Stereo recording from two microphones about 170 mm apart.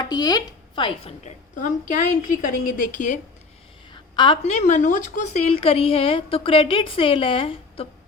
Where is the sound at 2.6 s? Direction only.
55° left (ahead or behind).